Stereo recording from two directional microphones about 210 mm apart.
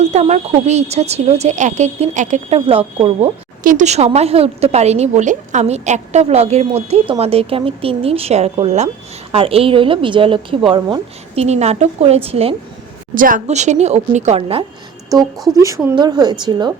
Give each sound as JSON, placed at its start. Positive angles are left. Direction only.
{"t": 0.0, "sound": "a woman's voice", "side_deg": -35}
{"t": 3.6, "sound": "a woman's voice", "side_deg": -40}
{"t": 13.1, "sound": "a woman's voice", "side_deg": -40}